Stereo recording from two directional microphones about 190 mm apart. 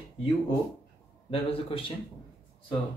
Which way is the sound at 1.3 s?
30° left (ahead or behind).